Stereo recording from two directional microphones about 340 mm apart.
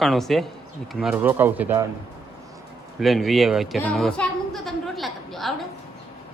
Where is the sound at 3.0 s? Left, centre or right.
Centre.